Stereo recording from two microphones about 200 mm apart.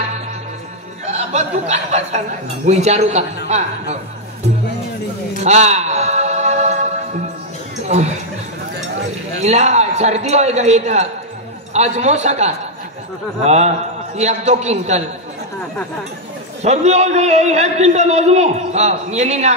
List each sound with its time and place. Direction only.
1.1 s a man's voice: 35° right (ahead or behind)
5.4 s music: 35° right (ahead or behind)
7.9 s a man's voice: 35° right (ahead or behind)
9.4 s a man's voice: 35° right (ahead or behind)
16.6 s a man's voice: 35° right (ahead or behind)